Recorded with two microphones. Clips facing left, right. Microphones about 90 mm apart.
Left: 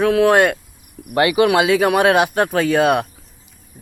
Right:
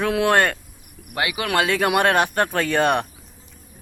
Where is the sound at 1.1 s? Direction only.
30° left (ahead or behind).